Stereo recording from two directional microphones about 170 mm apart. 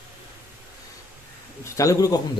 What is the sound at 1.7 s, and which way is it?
Speech, 20° left (ahead or behind).